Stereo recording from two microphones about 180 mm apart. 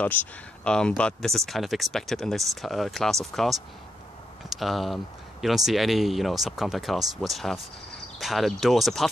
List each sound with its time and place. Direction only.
0.0 s speech: 10° left (ahead or behind)
4.5 s speech: centre (ahead or behind)